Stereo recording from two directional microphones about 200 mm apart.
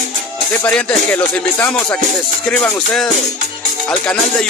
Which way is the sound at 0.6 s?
5° left (ahead or behind).